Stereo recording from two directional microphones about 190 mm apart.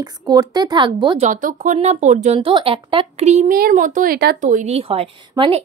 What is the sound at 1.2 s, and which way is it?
A woman's voice, 40° right (ahead or behind).